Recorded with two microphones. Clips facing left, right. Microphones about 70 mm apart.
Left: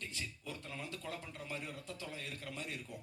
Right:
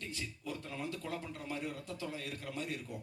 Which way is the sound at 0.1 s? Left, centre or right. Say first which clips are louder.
Right 3 dB; right.